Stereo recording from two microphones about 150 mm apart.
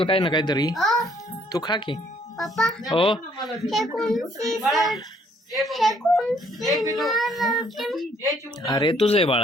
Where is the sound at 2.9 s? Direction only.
35° left (ahead or behind).